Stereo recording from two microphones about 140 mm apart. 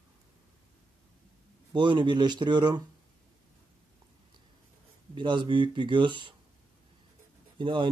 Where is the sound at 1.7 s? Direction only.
35° right (ahead or behind).